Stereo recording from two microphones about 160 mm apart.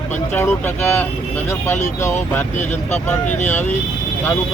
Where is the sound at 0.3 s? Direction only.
15° left (ahead or behind).